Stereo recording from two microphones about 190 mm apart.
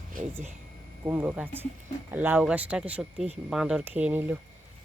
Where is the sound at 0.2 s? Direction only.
45° right (ahead or behind).